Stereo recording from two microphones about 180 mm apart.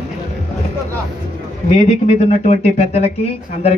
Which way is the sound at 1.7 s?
35° left (ahead or behind).